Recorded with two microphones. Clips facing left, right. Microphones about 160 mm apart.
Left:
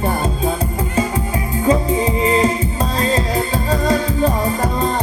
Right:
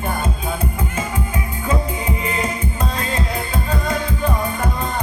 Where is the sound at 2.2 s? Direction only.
35° left (ahead or behind).